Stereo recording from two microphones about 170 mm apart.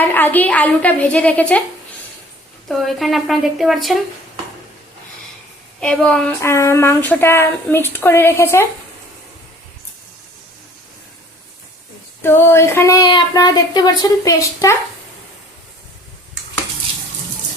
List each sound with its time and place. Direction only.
0.0 s speech: 10° left (ahead or behind)
2.6 s speech: centre (ahead or behind)
5.8 s speech: 5° left (ahead or behind)
12.2 s speech: 15° left (ahead or behind)